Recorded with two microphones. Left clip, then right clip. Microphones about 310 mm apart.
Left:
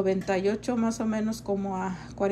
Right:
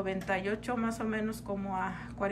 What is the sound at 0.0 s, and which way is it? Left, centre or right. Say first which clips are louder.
A woman's voice: left 7 dB; centre.